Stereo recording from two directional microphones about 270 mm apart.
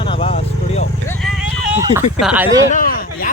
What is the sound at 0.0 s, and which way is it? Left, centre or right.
Vehicle, centre.